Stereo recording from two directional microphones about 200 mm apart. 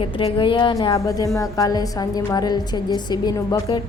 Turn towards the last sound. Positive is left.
turn(degrees=20)  # may be behind; listen again after turning